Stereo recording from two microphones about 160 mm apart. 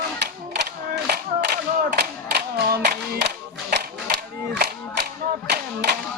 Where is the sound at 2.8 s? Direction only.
90° right.